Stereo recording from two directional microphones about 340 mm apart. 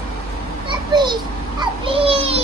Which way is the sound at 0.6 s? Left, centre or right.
Centre.